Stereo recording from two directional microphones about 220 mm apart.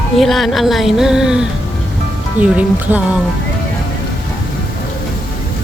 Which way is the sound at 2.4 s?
5° right (ahead or behind).